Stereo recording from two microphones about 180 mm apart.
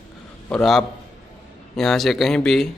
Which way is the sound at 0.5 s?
5° left (ahead or behind).